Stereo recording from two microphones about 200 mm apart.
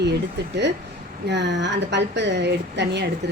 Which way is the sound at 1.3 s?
60° right (ahead or behind).